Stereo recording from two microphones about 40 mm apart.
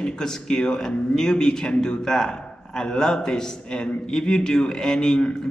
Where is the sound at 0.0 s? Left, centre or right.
Centre.